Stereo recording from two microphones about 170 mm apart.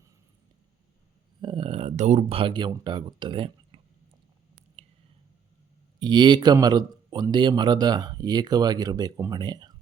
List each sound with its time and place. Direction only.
1.4 s speech: 30° right (ahead or behind)
4.8 s a sound: 35° right (ahead or behind)
6.0 s speech: 25° right (ahead or behind)